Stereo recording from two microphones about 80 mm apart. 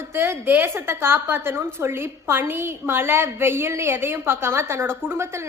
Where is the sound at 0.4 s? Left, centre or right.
Right.